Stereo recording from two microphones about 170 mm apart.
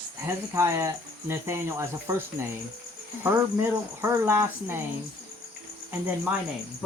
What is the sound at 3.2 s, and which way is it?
Speech, 15° right (ahead or behind).